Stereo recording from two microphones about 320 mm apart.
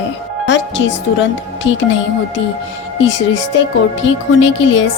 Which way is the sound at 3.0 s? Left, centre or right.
Left.